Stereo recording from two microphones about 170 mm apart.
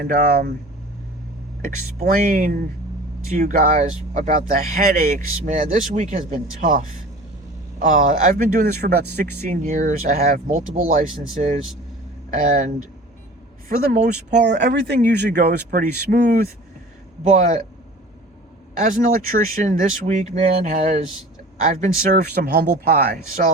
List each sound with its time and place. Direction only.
0.0 s speech: 65° right (ahead or behind)
2.0 s speech: 55° right (ahead or behind)
14.3 s speech: 80° right; by 16.5 s 60° right (ahead or behind)
17.2 s speech: 50° right (ahead or behind)
18.8 s speech: 55° right (ahead or behind)